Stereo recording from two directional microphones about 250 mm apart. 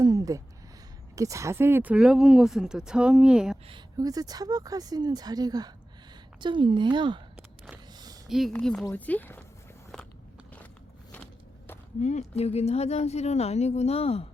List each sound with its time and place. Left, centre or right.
0.0 s a sound: centre
1.1 s speech: centre
3.7 s a woman's voice: centre
7.9 s a sound: centre
8.3 s speech: centre
11.9 s a woman's voice: left